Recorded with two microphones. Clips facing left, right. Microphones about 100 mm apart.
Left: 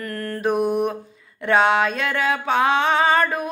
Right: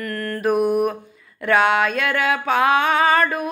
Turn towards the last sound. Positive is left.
turn(degrees=30)  # may be behind; listen again after turning